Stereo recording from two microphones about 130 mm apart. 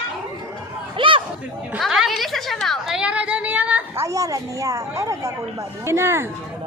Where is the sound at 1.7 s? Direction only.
5° right (ahead or behind).